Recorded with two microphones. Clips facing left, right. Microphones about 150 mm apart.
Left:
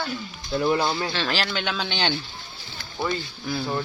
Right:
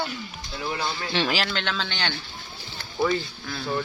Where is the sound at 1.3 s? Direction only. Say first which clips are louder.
Even; centre (ahead or behind).